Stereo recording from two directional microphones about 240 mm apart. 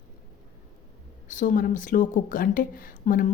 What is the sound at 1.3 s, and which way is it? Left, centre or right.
Speech, left.